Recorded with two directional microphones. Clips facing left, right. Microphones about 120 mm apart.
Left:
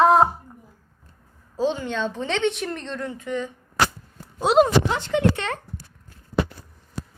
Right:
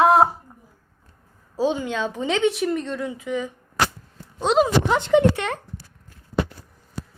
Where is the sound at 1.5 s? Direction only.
10° right (ahead or behind).